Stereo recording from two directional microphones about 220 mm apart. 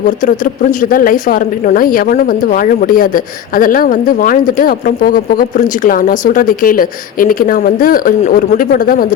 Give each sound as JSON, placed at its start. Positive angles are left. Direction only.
{"t": 0.3, "sound": "speech", "side_deg": 35}